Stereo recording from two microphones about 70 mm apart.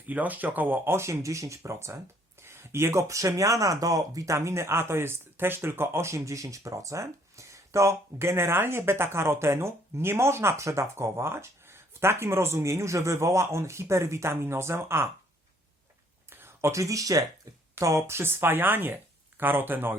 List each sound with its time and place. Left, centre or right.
0.0 s speech: right
0.9 s speech: right
2.4 s speech: right
16.3 s speech: right